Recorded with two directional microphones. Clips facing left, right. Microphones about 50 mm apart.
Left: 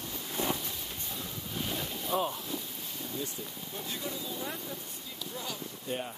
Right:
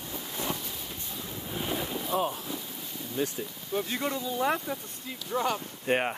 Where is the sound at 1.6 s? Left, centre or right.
Centre.